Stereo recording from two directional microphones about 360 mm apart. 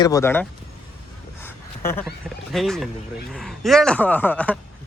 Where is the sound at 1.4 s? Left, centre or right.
Centre.